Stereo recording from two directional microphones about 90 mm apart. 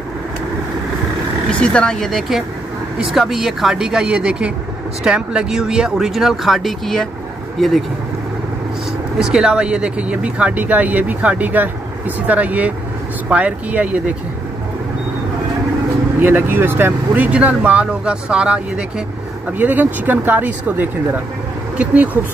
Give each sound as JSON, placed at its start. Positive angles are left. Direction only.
{"t": 1.5, "sound": "speech", "side_deg": 10}
{"t": 9.2, "sound": "speech", "side_deg": -5}
{"t": 16.2, "sound": "speech", "side_deg": -25}